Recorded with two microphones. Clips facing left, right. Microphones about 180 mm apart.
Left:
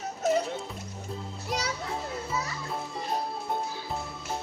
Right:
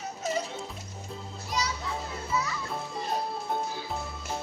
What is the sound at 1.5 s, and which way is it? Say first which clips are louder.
Children playing: even; 65° left (ahead or behind).